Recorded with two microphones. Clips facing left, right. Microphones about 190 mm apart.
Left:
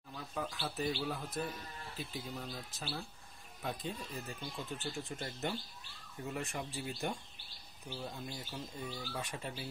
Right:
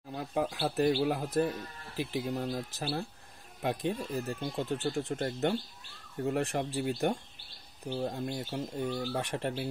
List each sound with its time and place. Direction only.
0.1 s speech: 65° right (ahead or behind)